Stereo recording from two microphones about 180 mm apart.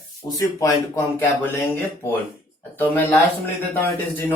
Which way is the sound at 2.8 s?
10° left (ahead or behind).